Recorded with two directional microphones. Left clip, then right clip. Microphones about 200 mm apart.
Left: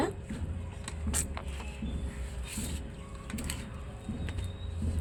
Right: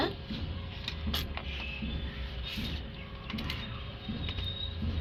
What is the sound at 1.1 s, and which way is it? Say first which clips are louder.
Printer: even; 25° left (ahead or behind).